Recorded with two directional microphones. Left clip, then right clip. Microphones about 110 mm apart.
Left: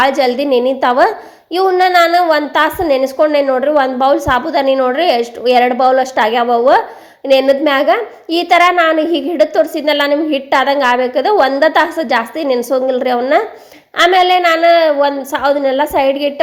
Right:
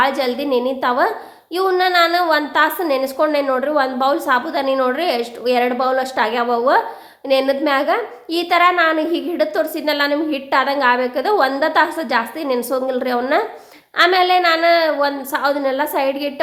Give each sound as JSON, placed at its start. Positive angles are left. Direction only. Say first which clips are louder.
{"t": 0.0, "sound": "a woman's voice", "louder": "left 6 dB", "side_deg": 40}
{"t": 1.5, "sound": "a woman's voice", "louder": "left 5 dB", "side_deg": 25}
{"t": 3.7, "sound": "a woman's voice", "louder": "left 6 dB", "side_deg": 30}